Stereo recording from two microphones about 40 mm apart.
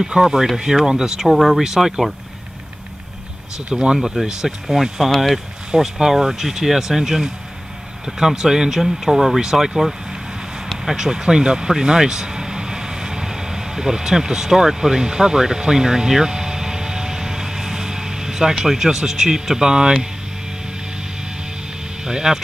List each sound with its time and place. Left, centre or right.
0.0 s speech: centre
1.3 s speech: centre
3.5 s speech: centre
10.9 s vehicle: centre
18.6 s speech: centre
22.0 s speech: centre